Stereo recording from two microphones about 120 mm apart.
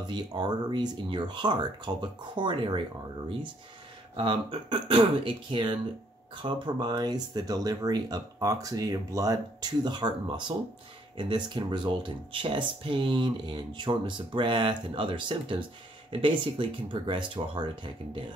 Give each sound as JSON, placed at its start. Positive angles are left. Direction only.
{"t": 0.0, "sound": "speech", "side_deg": -35}
{"t": 4.2, "sound": "speech", "side_deg": -40}